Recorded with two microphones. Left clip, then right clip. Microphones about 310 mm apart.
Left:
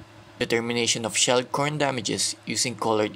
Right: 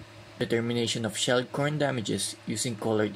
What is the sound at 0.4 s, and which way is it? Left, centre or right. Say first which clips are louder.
Speech: left 4 dB; left.